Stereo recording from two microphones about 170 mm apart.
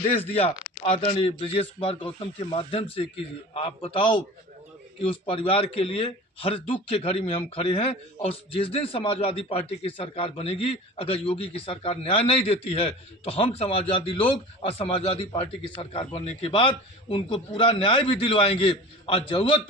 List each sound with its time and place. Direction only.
0.0 s a man's voice: 35° left (ahead or behind)